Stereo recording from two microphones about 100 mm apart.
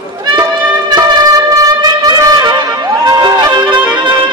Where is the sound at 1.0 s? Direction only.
40° right (ahead or behind).